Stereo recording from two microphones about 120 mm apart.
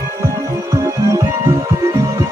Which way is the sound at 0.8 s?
25° right (ahead or behind).